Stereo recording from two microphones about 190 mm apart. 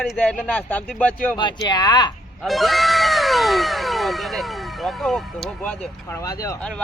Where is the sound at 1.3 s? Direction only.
20° left (ahead or behind).